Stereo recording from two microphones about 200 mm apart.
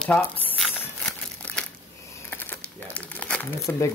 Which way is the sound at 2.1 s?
10° left (ahead or behind).